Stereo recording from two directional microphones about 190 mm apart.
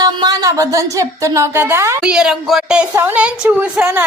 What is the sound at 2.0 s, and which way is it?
A woman's voice, 5° right (ahead or behind).